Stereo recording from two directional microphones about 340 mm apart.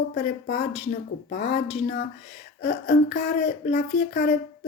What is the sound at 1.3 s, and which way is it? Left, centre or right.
Speech, centre.